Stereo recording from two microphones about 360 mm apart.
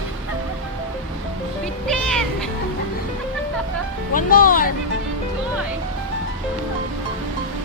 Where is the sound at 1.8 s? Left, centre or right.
Centre.